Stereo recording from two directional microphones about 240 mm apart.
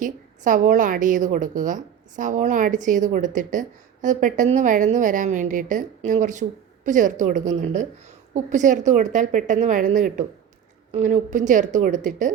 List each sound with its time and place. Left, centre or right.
0.0 s a woman's voice: right